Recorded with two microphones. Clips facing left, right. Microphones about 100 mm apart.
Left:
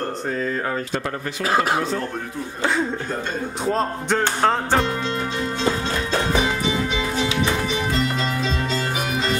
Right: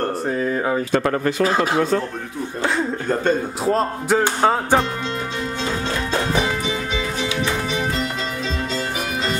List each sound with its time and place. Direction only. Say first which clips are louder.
0.3 s speech: right 3 dB; 10° right (ahead or behind)
0.9 s speech: right 7 dB; 70° right (ahead or behind)
3.6 s music: right 2 dB; centre (ahead or behind)